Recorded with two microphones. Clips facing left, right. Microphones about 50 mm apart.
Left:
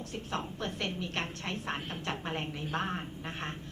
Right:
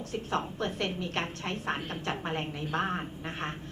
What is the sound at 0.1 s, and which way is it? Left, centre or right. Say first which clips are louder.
A woman's voice: right 6 dB; centre.